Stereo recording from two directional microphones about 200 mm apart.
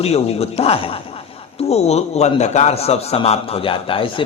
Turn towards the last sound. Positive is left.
turn(degrees=25)  # may be behind; listen again after turning